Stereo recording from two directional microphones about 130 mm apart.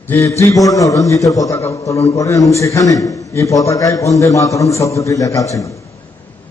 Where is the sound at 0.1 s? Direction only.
20° left (ahead or behind).